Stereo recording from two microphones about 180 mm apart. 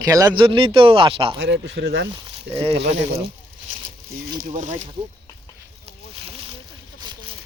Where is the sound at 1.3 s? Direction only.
90° right.